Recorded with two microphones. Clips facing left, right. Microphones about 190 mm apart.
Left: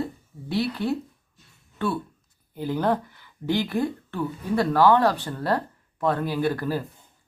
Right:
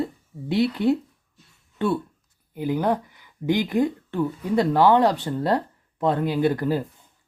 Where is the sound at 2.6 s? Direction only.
15° right (ahead or behind).